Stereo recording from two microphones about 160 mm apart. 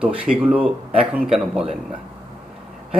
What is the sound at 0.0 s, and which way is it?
Speech, 10° right (ahead or behind).